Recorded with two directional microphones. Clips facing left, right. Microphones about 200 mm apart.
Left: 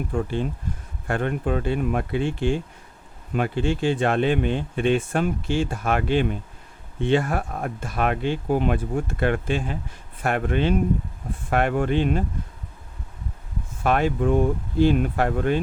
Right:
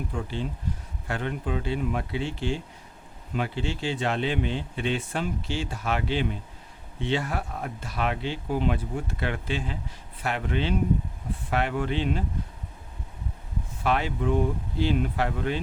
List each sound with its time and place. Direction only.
0.1 s speech: 50° left (ahead or behind)
13.8 s speech: 50° left (ahead or behind)